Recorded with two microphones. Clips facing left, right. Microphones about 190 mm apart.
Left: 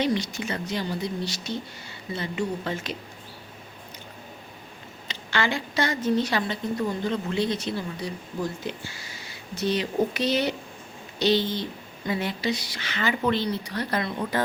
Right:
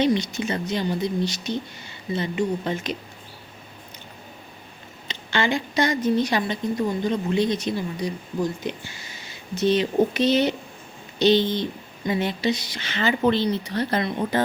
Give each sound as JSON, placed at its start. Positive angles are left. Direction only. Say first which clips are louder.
{"t": 0.0, "sound": "speech", "louder": "right 4 dB", "side_deg": -20}
{"t": 5.0, "sound": "a woman's voice", "louder": "right 3 dB", "side_deg": -20}